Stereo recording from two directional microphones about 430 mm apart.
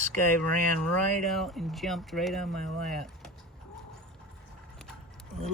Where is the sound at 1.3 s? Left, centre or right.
Centre.